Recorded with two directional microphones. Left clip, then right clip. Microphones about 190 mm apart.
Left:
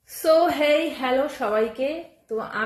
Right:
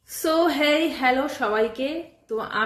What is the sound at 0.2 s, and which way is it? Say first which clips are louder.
A woman's voice: left 2 dB; 10° right (ahead or behind).